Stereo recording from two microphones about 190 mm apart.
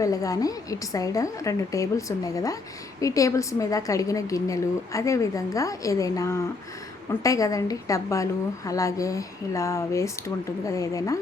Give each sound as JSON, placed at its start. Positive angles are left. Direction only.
{"t": 0.0, "sound": "a woman's voice", "side_deg": 20}